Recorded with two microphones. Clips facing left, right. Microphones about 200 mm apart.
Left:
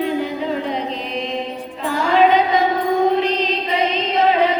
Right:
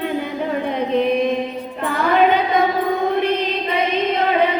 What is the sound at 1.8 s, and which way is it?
Music, 55° right (ahead or behind).